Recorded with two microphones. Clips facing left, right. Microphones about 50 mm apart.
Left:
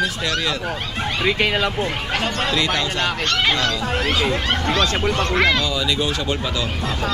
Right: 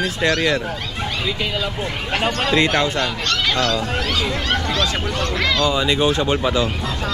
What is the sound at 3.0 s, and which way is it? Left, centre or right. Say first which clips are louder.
Fowl: left 1 dB; left.